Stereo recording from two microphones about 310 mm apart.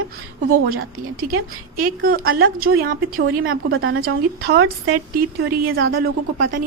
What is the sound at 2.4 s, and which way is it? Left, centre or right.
A woman's voice, right.